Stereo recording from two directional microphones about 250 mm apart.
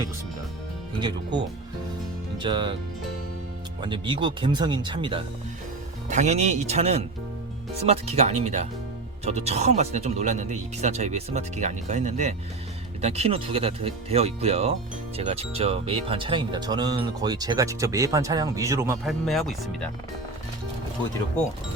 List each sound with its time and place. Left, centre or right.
0.9 s speech: centre
2.4 s speech: centre
3.8 s speech: centre
19.0 s speech: centre